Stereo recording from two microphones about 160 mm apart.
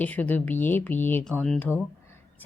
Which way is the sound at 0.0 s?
10° left (ahead or behind).